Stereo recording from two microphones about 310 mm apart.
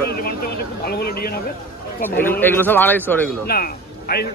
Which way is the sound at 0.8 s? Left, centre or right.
Left.